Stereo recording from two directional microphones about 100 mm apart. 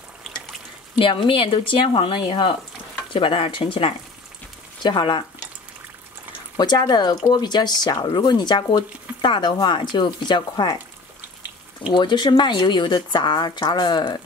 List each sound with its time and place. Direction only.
0.9 s speech: 60° left (ahead or behind)
6.5 s speech: 45° left (ahead or behind)
11.9 s speech: 50° left (ahead or behind)